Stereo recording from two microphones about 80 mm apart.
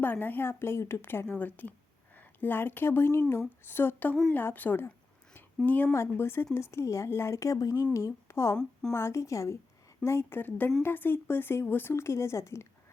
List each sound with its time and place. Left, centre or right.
0.0 s a woman's voice: left
5.9 s a woman's voice: left